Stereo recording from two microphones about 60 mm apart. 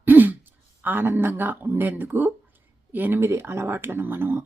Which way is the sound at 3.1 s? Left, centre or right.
Right.